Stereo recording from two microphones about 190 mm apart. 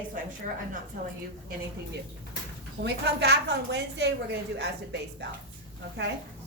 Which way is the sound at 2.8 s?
60° right (ahead or behind).